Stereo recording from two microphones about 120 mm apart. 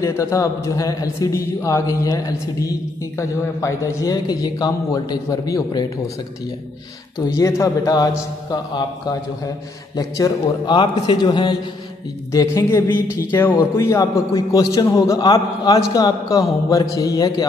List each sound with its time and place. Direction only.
0.0 s a man's voice: 25° left (ahead or behind)
7.2 s a man's voice: 25° left (ahead or behind)
12.3 s a man's voice: 25° left (ahead or behind)